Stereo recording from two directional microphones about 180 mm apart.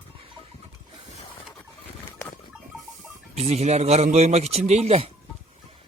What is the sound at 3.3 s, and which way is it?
A man's voice, 35° right (ahead or behind).